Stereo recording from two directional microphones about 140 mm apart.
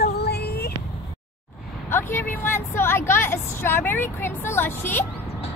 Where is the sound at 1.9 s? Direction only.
15° left (ahead or behind).